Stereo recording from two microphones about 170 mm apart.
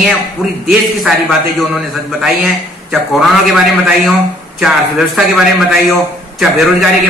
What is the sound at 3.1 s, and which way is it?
Speech, centre (ahead or behind).